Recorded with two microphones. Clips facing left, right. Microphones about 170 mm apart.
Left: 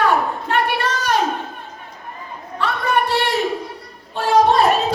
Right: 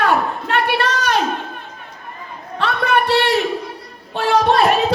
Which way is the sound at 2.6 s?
70° right (ahead or behind).